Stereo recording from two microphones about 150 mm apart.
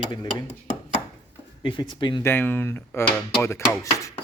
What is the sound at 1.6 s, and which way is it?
Speech, 30° left (ahead or behind).